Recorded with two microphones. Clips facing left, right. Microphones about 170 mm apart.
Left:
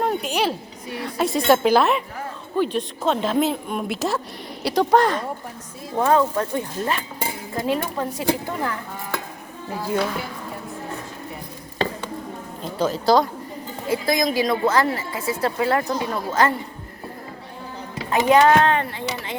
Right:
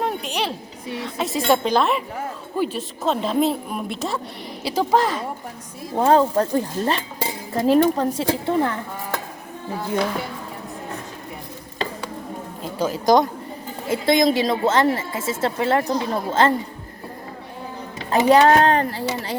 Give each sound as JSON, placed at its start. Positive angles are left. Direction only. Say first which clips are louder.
{"t": 0.0, "sound": "a sound", "louder": "left 3 dB", "side_deg": 0}
{"t": 1.2, "sound": "a woman's voice", "louder": "left 3 dB", "side_deg": 0}
{"t": 6.0, "sound": "cutlery", "louder": "right 2 dB", "side_deg": -30}
{"t": 8.4, "sound": "a woman's voice", "louder": "right 6 dB", "side_deg": -30}
{"t": 12.8, "sound": "a woman's voice", "louder": "right 1 dB", "side_deg": -10}
{"t": 13.9, "sound": "a woman's voice", "louder": "right 3 dB", "side_deg": -25}
{"t": 18.3, "sound": "cutlery", "louder": "right 1 dB", "side_deg": -35}